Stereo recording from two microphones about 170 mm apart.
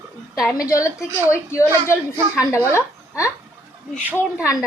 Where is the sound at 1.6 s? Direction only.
10° right (ahead or behind).